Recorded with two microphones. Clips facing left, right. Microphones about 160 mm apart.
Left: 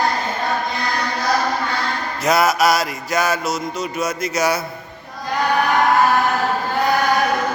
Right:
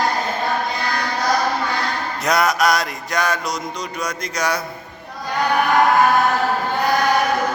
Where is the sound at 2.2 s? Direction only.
5° left (ahead or behind).